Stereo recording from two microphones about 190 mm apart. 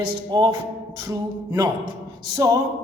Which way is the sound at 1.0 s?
15° right (ahead or behind).